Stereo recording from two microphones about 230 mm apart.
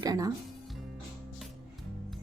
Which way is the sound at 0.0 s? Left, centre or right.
Centre.